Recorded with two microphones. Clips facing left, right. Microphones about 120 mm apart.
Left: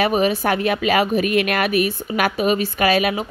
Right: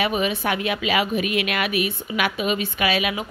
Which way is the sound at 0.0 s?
40° left (ahead or behind).